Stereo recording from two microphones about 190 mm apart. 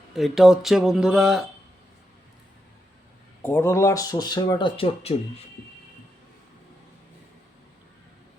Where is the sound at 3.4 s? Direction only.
15° left (ahead or behind); by 5.1 s 30° left (ahead or behind).